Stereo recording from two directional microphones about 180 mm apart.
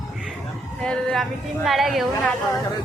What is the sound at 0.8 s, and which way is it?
A woman's voice, 5° left (ahead or behind).